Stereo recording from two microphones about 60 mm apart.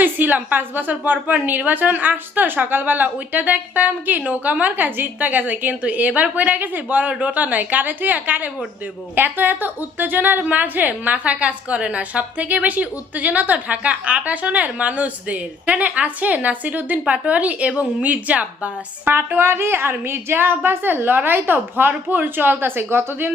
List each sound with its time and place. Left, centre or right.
0.0 s a woman's voice: right
19.1 s a woman's voice: right